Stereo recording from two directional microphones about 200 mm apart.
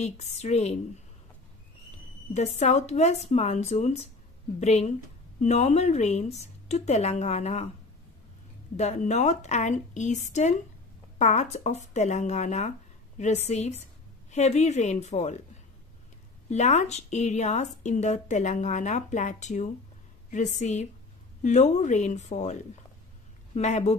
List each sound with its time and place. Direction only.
0.0 s speech: 35° left (ahead or behind)
2.3 s speech: 35° left (ahead or behind)
8.7 s speech: 35° left (ahead or behind)
16.4 s speech: 35° left (ahead or behind)